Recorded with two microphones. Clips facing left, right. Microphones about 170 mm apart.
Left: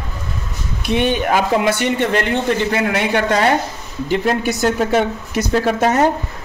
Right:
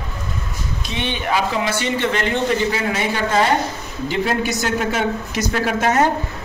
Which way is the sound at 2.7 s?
60° left (ahead or behind).